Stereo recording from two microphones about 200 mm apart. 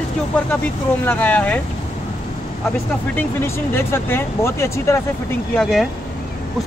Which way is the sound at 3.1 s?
10° left (ahead or behind).